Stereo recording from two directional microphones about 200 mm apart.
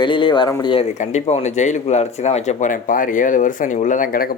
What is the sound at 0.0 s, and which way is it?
Speech, 25° left (ahead or behind).